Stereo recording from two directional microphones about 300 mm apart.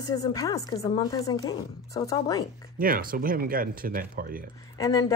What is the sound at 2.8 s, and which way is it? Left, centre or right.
Speech, right.